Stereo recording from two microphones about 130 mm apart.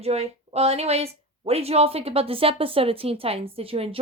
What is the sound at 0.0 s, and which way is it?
Speech, 55° right (ahead or behind).